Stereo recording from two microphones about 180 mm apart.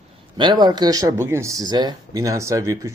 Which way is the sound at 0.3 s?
25° right (ahead or behind).